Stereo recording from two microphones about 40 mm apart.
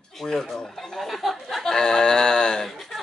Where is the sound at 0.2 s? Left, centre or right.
Centre.